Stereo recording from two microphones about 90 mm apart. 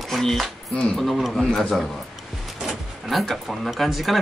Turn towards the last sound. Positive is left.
turn(degrees=0)  # may be behind; listen again after turning